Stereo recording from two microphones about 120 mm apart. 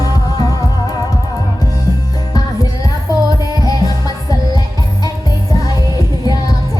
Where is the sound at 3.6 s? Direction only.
30° left (ahead or behind).